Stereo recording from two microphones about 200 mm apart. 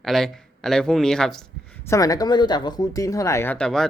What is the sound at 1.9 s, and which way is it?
Speech, 15° left (ahead or behind).